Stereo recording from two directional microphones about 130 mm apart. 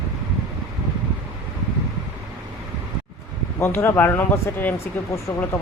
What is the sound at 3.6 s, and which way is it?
Speech, 20° left (ahead or behind).